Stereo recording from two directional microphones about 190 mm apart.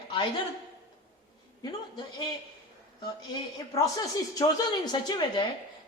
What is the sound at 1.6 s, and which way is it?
Speech, 20° left (ahead or behind).